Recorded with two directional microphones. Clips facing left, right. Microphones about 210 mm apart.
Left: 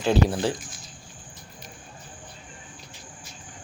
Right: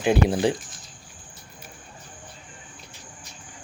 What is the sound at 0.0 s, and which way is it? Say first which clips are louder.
Speech: right 2 dB; 15° right (ahead or behind).